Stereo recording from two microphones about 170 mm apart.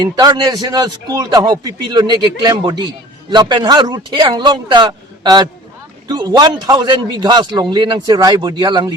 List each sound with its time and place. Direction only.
0.0 s a man's voice: 25° right (ahead or behind)